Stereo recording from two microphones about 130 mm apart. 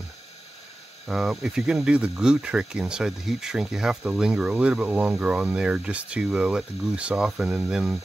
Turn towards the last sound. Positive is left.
turn(degrees=-5)  # may be behind; listen again after turning